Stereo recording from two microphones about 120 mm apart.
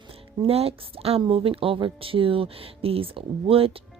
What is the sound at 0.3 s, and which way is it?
Speech, 55° right (ahead or behind).